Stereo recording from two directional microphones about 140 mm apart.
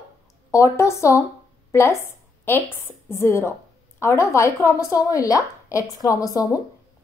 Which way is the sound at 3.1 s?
20° left (ahead or behind).